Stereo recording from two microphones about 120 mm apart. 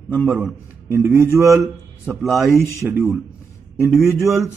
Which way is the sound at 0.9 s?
20° right (ahead or behind).